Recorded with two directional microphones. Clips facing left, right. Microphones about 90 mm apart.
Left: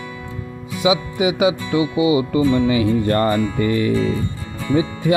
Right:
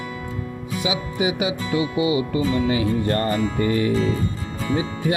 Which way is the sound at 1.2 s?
90° left.